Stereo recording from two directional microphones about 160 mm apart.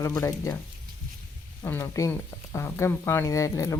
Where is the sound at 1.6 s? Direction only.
15° left (ahead or behind).